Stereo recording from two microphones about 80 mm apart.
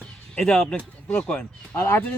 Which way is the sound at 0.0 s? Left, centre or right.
Centre.